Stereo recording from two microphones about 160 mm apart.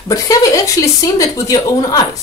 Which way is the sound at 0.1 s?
20° left (ahead or behind).